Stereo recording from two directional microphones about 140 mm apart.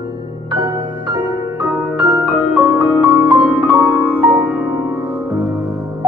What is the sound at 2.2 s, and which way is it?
Music, 10° right (ahead or behind).